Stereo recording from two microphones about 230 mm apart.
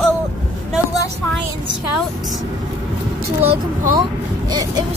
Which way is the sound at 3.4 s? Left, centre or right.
Right.